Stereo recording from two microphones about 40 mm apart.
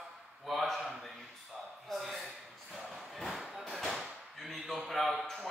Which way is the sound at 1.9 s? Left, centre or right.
Centre.